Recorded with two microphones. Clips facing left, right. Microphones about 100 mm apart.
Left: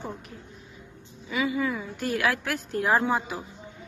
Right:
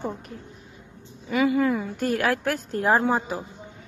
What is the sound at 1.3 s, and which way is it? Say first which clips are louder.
A woman's voice: right 6 dB; 55° right (ahead or behind).